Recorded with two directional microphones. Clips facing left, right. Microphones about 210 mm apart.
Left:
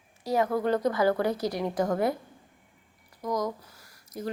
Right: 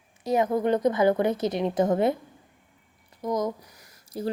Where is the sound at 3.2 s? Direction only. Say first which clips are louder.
Right 3 dB; 20° right (ahead or behind).